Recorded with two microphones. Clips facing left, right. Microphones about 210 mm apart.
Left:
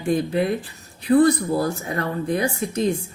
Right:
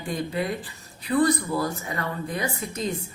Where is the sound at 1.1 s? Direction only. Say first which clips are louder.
Left 5 dB; 45° left (ahead or behind).